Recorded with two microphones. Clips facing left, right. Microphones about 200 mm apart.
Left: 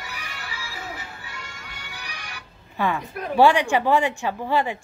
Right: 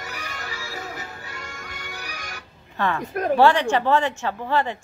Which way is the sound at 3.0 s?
45° right (ahead or behind).